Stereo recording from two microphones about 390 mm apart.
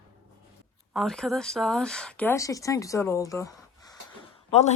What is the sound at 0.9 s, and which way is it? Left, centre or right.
Speech, centre.